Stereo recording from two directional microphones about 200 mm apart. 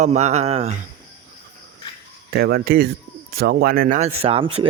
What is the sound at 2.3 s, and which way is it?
A man's voice, 50° right (ahead or behind).